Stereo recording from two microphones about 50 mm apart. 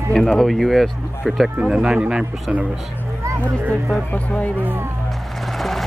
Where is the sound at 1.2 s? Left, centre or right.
Centre.